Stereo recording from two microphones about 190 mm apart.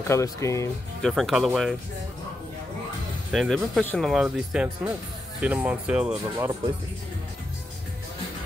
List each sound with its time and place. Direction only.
0.1 s speech: 15° left (ahead or behind)
1.0 s speech: centre (ahead or behind)
3.3 s speech: centre (ahead or behind)